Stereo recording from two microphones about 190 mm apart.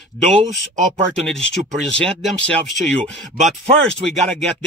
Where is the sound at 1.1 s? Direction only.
5° left (ahead or behind).